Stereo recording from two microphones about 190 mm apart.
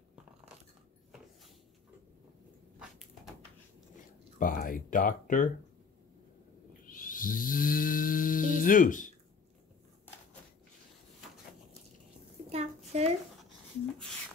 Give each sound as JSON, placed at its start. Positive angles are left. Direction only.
{"t": 4.4, "sound": "speech", "side_deg": 45}
{"t": 6.9, "sound": "snoring", "side_deg": 45}
{"t": 12.4, "sound": "a sound", "side_deg": -35}